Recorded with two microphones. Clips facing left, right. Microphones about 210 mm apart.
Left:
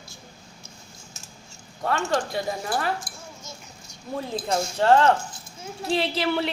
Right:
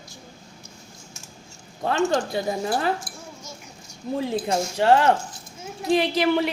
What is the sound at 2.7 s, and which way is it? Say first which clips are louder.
Speech: right 3 dB; 25° right (ahead or behind).